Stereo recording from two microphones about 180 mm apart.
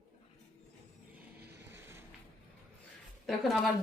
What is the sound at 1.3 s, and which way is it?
Vehicle, 60° right (ahead or behind).